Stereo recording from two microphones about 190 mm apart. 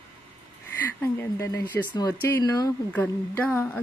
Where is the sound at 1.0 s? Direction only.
15° left (ahead or behind).